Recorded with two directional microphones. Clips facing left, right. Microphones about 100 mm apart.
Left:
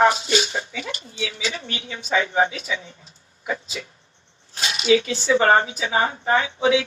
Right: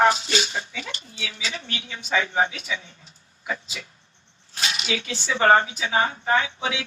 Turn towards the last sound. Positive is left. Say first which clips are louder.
# left 5 dB
turn(degrees=25)  # may be behind; listen again after turning